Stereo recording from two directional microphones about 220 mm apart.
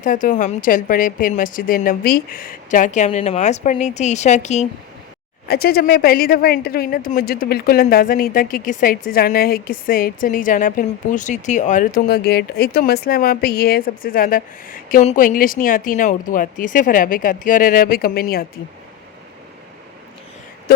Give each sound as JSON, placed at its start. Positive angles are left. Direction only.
{"t": 0.0, "sound": "speech", "side_deg": 35}
{"t": 5.5, "sound": "speech", "side_deg": 45}
{"t": 20.7, "sound": "a sound", "side_deg": 45}